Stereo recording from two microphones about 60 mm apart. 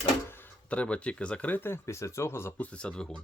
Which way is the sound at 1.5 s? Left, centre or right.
Left.